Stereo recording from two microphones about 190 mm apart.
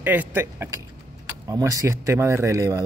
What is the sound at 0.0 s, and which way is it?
Speech, 10° right (ahead or behind).